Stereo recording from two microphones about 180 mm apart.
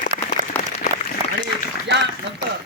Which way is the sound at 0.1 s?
40° right (ahead or behind).